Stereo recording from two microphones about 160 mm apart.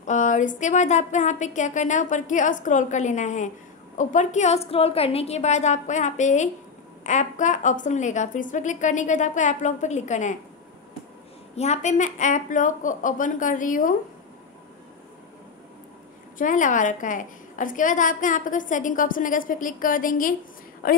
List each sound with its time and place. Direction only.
0.0 s a woman's voice: 50° left (ahead or behind)
11.5 s a woman's voice: 45° left (ahead or behind)
16.3 s a woman's voice: 55° left (ahead or behind)